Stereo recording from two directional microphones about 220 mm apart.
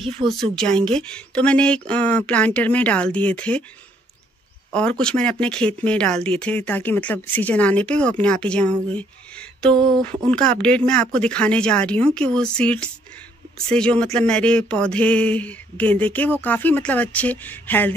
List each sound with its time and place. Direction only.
0.3 s speech: 5° left (ahead or behind)
4.7 s speech: 5° left (ahead or behind)